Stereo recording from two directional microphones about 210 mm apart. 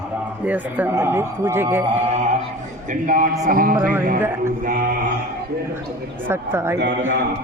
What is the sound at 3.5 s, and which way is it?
Music, 40° right (ahead or behind).